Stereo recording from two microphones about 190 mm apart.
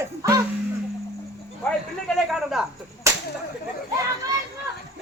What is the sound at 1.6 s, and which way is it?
Cricket, 5° left (ahead or behind).